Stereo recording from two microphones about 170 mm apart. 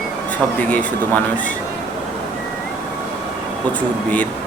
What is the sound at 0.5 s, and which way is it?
Speech, 10° left (ahead or behind).